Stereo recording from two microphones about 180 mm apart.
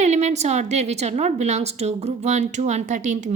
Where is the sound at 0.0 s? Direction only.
40° right (ahead or behind).